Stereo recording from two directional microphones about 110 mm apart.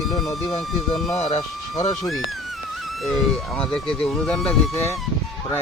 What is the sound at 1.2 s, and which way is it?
Speech, 70° left (ahead or behind).